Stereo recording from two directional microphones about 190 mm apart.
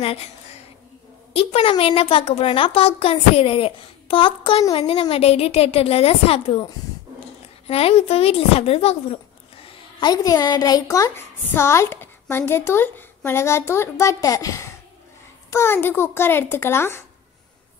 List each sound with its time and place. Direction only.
1.3 s a woman's voice: 30° left (ahead or behind)
7.6 s a woman's voice: 30° left (ahead or behind)
9.9 s a woman's voice: 20° left (ahead or behind)